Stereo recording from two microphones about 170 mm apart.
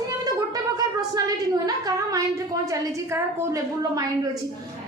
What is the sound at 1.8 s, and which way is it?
A woman's voice, 20° right (ahead or behind).